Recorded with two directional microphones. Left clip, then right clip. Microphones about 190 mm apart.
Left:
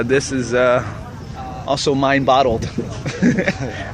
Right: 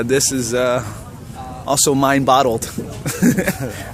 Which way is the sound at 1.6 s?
40° right (ahead or behind).